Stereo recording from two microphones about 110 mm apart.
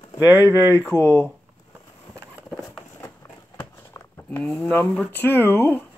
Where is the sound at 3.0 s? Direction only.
20° left (ahead or behind).